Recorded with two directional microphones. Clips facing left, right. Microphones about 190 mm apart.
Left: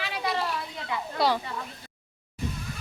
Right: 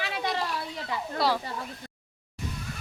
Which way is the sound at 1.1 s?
Centre (ahead or behind).